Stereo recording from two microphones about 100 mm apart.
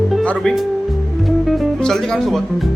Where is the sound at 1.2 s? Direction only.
Centre (ahead or behind).